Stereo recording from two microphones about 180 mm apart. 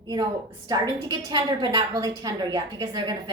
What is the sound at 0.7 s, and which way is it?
A woman's voice, 25° right (ahead or behind).